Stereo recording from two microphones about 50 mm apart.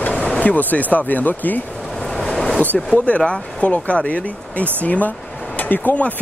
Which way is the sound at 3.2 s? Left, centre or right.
Left.